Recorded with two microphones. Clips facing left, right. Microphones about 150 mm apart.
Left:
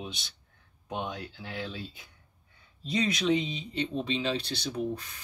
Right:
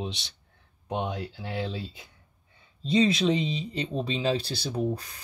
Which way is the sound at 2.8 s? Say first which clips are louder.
Right 6 dB; 30° right (ahead or behind).